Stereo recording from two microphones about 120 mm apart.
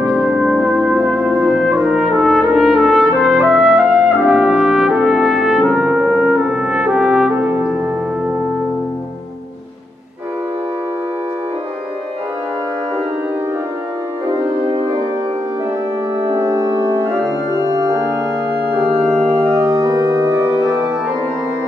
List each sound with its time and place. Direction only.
0.1 s music: 5° right (ahead or behind)
1.5 s trumpet: 5° right (ahead or behind)
16.3 s music: 30° right (ahead or behind)
19.5 s music: 30° right (ahead or behind)